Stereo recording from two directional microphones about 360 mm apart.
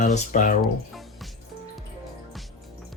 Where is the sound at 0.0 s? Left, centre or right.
Left.